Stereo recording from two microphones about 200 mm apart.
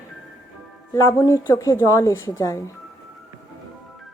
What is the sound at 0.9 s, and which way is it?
A woman's voice, 15° left (ahead or behind).